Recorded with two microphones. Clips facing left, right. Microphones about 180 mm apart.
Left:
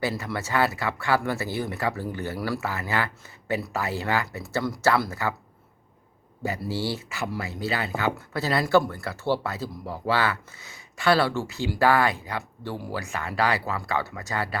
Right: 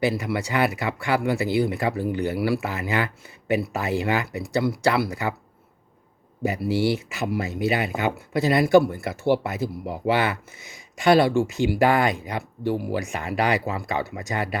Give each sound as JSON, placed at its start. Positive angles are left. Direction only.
{"t": 0.0, "sound": "speech", "side_deg": -15}
{"t": 6.4, "sound": "speech", "side_deg": -15}